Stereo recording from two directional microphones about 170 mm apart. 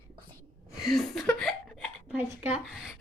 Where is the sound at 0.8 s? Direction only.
Centre (ahead or behind).